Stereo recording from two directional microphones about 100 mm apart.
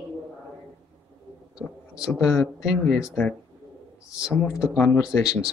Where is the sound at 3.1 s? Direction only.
10° left (ahead or behind).